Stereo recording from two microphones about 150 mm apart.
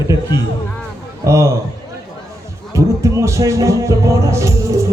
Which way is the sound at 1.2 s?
20° right (ahead or behind).